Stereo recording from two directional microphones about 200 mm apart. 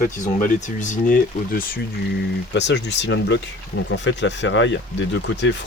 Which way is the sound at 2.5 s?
60° left (ahead or behind).